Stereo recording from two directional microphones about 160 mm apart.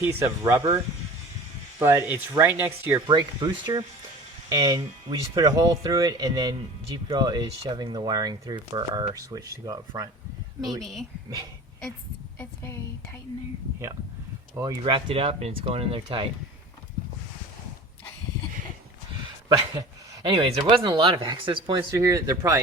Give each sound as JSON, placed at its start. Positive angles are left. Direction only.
{"t": 0.0, "sound": "speech", "side_deg": -15}
{"t": 1.8, "sound": "speech", "side_deg": -15}
{"t": 3.1, "sound": "speech", "side_deg": -25}
{"t": 10.7, "sound": "a woman's voice", "side_deg": 0}
{"t": 14.5, "sound": "speech", "side_deg": -25}
{"t": 20.2, "sound": "speech", "side_deg": -35}
{"t": 21.9, "sound": "speech", "side_deg": -20}